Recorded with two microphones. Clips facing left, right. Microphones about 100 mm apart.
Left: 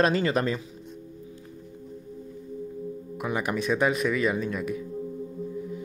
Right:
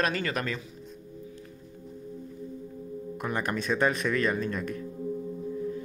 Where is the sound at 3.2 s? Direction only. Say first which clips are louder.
Left 3 dB; 5° left (ahead or behind).